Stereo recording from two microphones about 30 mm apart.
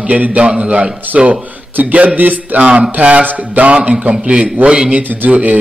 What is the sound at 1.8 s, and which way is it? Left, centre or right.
Music, right.